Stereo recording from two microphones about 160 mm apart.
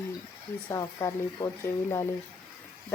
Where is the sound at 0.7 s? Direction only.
20° left (ahead or behind).